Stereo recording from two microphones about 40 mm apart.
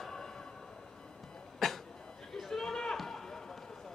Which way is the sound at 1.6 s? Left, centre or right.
Centre.